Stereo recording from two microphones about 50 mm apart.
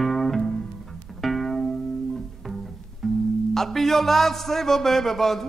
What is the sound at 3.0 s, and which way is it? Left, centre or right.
Music, centre.